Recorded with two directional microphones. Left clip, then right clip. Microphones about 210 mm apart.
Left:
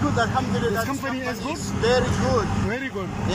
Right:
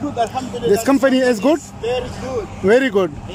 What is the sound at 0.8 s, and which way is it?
Speech, 45° right (ahead or behind).